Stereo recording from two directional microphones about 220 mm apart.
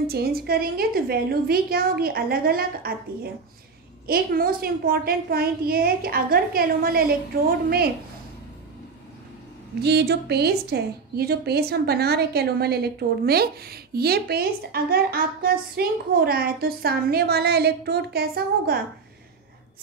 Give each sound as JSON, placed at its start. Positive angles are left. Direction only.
{"t": 0.0, "sound": "a woman's voice", "side_deg": -45}
{"t": 4.1, "sound": "a woman's voice", "side_deg": -40}
{"t": 9.8, "sound": "a woman's voice", "side_deg": -50}